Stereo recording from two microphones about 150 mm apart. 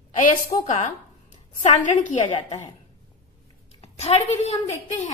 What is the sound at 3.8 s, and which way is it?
Speech, 45° left (ahead or behind).